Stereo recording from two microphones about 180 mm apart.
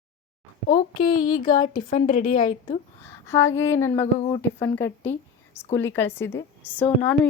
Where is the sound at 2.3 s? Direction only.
25° left (ahead or behind).